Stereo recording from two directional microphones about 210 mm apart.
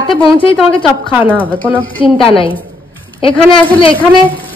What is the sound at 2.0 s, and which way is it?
Speech, 25° left (ahead or behind).